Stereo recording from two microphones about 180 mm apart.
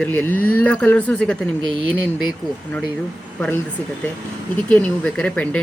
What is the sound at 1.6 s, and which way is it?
Speech, 25° right (ahead or behind).